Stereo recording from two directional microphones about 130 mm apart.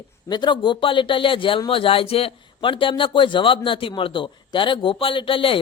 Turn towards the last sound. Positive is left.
turn(degrees=45)  # may be behind; listen again after turning